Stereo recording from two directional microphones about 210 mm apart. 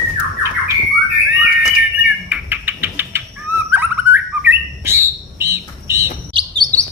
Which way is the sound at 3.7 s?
10° right (ahead or behind).